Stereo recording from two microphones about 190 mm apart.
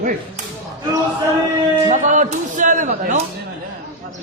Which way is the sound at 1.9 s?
40° right (ahead or behind).